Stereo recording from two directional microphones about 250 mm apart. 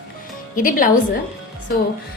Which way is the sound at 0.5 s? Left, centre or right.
Left.